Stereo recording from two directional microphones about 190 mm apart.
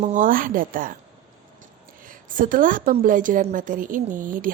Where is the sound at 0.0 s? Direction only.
40° right (ahead or behind).